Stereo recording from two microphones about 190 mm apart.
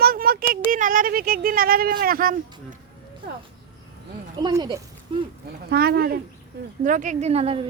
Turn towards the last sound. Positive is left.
turn(degrees=-30)  # may be behind; listen again after turning